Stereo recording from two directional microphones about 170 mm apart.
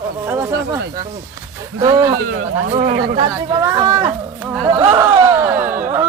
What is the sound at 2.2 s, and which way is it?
Speech, 70° right (ahead or behind).